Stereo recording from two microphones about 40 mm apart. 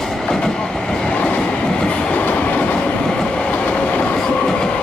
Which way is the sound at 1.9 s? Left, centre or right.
Left.